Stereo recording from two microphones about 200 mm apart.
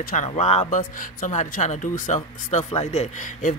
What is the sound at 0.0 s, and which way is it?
Speech, 40° left (ahead or behind).